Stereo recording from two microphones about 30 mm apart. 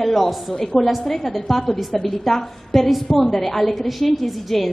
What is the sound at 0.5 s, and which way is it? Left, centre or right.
A woman's voice, centre.